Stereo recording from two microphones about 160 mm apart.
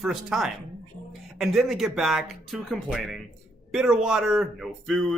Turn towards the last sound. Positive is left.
turn(degrees=0)  # may be behind; listen again after turning